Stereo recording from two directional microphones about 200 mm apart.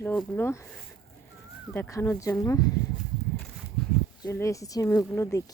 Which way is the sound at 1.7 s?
10° left (ahead or behind).